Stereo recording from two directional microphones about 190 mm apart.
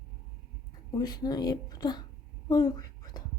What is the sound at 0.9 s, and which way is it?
Speech, 20° left (ahead or behind).